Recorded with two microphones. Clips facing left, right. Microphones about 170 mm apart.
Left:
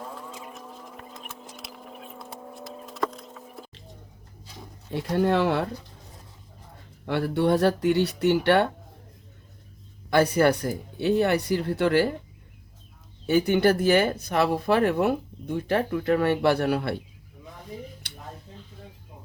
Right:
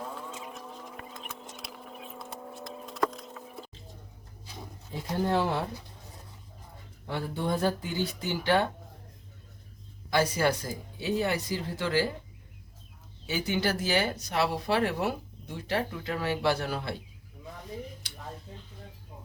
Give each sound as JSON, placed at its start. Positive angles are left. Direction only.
{"t": 0.0, "sound": "rodents", "side_deg": 0}
{"t": 4.9, "sound": "speech", "side_deg": 70}
{"t": 7.0, "sound": "speech", "side_deg": 70}
{"t": 10.1, "sound": "speech", "side_deg": 60}
{"t": 13.2, "sound": "speech", "side_deg": 55}
{"t": 18.0, "sound": "a sound", "side_deg": 65}